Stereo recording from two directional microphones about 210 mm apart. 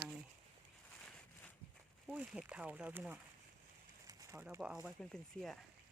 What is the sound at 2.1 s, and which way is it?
Speech, 5° right (ahead or behind).